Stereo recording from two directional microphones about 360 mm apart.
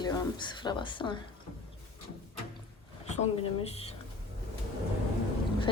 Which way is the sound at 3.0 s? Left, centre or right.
Centre.